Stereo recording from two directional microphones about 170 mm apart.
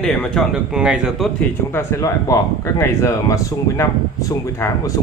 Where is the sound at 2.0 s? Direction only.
20° left (ahead or behind).